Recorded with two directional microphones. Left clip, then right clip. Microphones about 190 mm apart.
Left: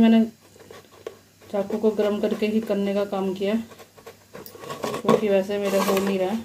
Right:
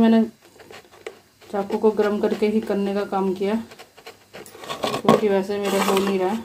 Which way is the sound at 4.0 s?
15° right (ahead or behind).